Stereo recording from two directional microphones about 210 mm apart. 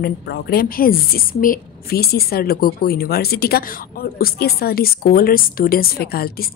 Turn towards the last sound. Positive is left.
turn(degrees=45)  # may be behind; listen again after turning